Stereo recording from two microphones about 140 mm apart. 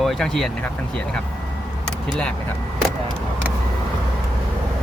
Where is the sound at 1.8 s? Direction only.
5° left (ahead or behind).